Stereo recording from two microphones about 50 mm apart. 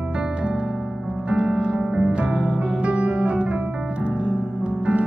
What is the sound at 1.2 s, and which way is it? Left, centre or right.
Music, centre.